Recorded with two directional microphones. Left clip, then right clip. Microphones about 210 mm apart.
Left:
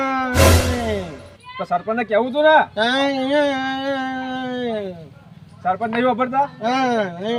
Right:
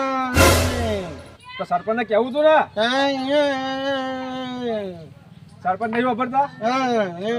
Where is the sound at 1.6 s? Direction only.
Centre (ahead or behind).